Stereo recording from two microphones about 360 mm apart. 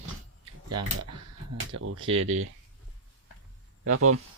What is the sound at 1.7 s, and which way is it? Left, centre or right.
Speech, right.